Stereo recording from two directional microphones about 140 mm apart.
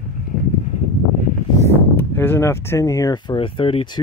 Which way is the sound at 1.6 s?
15° left (ahead or behind).